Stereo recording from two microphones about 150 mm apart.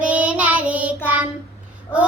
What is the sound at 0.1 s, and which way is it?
Child singing, 10° right (ahead or behind).